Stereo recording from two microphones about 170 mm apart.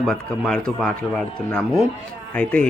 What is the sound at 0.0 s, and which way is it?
Speech, 5° left (ahead or behind).